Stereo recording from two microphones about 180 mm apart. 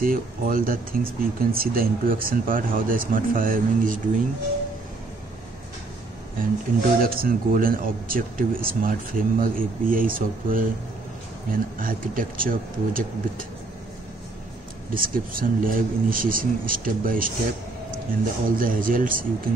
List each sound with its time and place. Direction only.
0.0 s speech: 50° right (ahead or behind)
7.0 s speech: 55° right (ahead or behind)
15.0 s speech: 50° right (ahead or behind)